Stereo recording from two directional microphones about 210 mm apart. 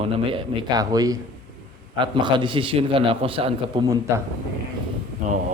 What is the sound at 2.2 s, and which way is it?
A man's voice, 20° right (ahead or behind).